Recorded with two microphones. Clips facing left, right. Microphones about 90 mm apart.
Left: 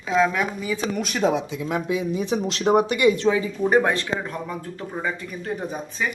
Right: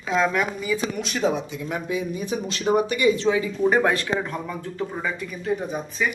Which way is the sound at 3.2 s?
35° left (ahead or behind).